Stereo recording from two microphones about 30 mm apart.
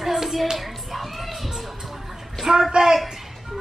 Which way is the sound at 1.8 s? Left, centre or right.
Centre.